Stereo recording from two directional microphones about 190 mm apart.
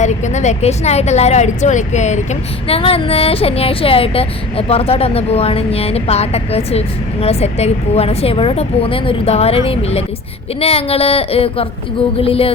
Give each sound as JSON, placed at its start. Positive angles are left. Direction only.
{"t": 0.0, "sound": "speech", "side_deg": 40}